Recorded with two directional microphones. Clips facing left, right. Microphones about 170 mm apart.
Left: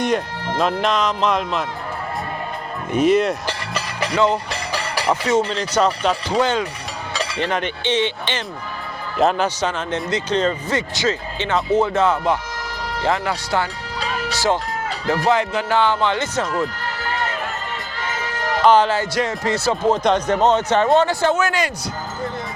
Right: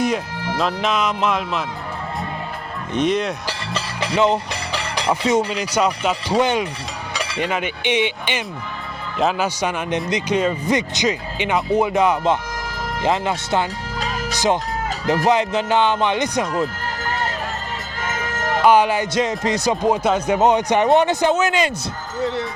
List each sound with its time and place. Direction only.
0.0 s speech: centre (ahead or behind)
2.9 s speech: 5° left (ahead or behind)
4.0 s speech: 20° right (ahead or behind)
4.7 s music: 5° left (ahead or behind)
5.2 s speech: 15° right (ahead or behind)
9.1 s speech: centre (ahead or behind)
9.6 s speech: 10° right (ahead or behind)
14.0 s music: 45° right (ahead or behind)
14.3 s speech: 20° right (ahead or behind)
17.0 s run: 40° right (ahead or behind)
18.0 s music: 50° right (ahead or behind)
18.6 s speech: 10° right (ahead or behind)